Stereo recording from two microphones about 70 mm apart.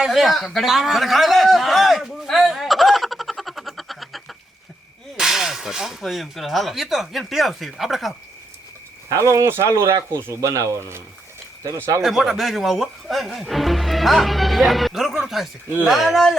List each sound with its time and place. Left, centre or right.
0.0 s a man's voice: centre
9.0 s speech: right
10.5 s speech: right
12.0 s speech: centre